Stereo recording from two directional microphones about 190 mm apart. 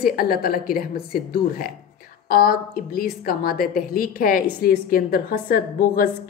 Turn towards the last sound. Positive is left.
turn(degrees=50)  # may be behind; listen again after turning